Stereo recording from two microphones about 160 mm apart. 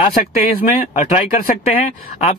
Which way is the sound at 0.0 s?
55° left (ahead or behind).